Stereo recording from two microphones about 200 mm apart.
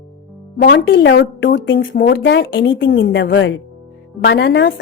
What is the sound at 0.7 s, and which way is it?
Speech, 70° left (ahead or behind).